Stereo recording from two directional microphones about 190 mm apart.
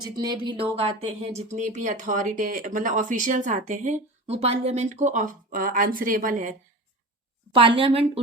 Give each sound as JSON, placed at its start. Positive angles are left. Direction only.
{"t": 0.0, "sound": "speech", "side_deg": -20}
{"t": 7.5, "sound": "a woman's voice", "side_deg": -30}